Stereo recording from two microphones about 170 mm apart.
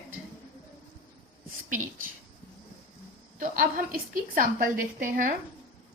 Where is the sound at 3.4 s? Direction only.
55° right (ahead or behind).